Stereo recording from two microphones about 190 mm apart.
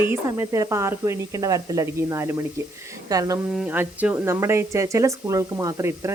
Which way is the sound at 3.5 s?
5° right (ahead or behind).